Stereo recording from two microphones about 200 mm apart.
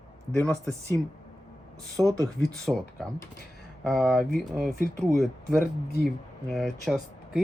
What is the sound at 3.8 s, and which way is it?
Speech, centre (ahead or behind).